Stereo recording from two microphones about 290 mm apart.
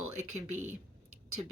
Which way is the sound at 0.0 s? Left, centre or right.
Right.